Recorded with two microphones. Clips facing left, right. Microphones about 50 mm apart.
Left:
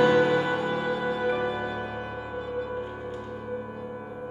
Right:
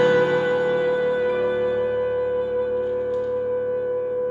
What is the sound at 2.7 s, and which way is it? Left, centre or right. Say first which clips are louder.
Music: right 10 dB; centre.